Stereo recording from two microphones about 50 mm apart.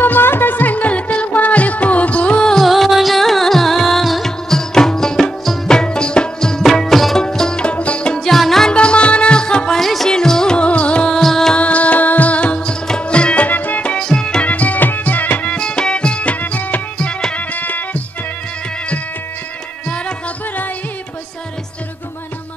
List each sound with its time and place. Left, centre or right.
0.0 s music: left
2.6 s music: centre
7.2 s music: centre
8.2 s music: centre
8.6 s music: left
11.1 s music: centre
11.5 s music: left
13.5 s music: left
13.9 s music: centre
14.4 s music: left
15.5 s music: centre; by 18.0 s left